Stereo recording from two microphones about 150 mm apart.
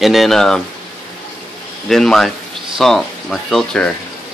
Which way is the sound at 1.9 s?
5° left (ahead or behind).